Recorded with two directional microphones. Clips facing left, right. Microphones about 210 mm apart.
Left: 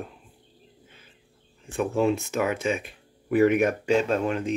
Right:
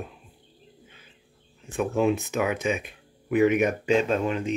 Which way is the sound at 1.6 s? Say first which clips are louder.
Even; centre (ahead or behind).